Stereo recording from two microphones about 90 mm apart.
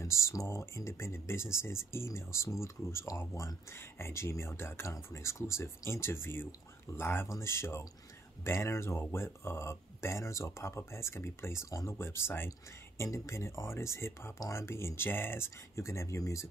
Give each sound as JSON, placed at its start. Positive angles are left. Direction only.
{"t": 0.0, "sound": "speech", "side_deg": 30}